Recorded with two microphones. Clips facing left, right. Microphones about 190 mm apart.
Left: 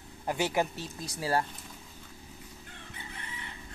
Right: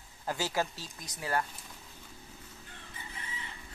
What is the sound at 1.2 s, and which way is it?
Speech, 30° left (ahead or behind).